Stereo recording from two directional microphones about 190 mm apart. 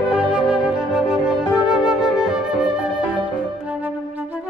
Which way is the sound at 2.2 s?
5° right (ahead or behind).